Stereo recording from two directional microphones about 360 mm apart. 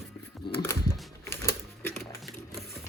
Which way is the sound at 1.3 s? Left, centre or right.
Centre.